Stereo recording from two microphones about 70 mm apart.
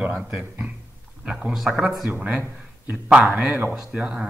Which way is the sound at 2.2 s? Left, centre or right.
Centre.